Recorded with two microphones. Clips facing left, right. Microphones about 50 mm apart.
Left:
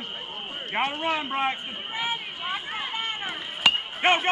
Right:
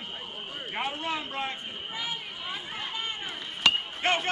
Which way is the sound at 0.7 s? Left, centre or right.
Left.